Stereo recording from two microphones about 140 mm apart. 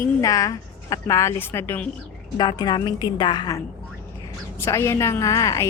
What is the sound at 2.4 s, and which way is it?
A woman's voice, 30° left (ahead or behind).